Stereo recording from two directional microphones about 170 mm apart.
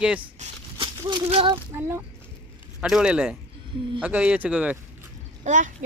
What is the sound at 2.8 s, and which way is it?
A child's voice, 5° right (ahead or behind).